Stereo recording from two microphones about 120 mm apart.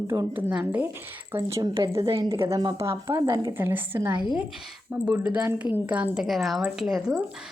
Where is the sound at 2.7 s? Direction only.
25° right (ahead or behind).